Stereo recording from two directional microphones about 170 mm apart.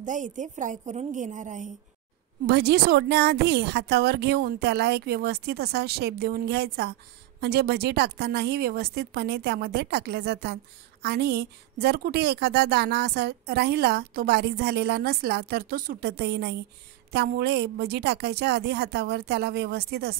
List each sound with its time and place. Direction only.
0.0 s a woman's voice: 45° right (ahead or behind)
2.4 s a woman's voice: 70° right (ahead or behind)